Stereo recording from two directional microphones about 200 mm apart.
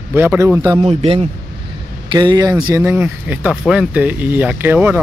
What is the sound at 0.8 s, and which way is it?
A man's voice, 30° right (ahead or behind).